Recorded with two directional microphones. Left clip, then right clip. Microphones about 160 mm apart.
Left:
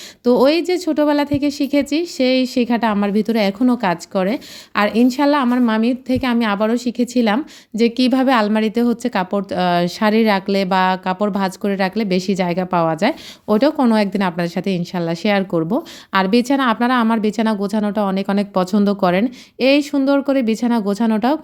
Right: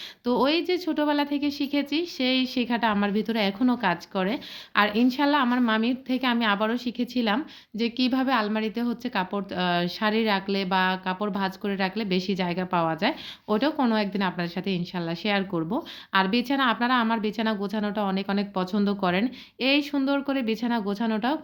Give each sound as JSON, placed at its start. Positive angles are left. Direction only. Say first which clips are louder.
{"t": 0.3, "sound": "a woman's voice", "louder": "left 9 dB", "side_deg": 45}